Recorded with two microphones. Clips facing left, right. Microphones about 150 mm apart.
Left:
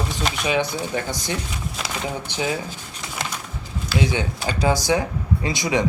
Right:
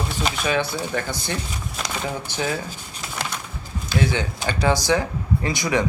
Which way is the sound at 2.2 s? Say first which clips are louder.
Left 2 dB; 15° left (ahead or behind).